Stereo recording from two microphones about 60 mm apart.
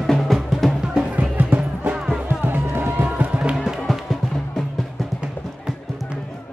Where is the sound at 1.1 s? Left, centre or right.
Right.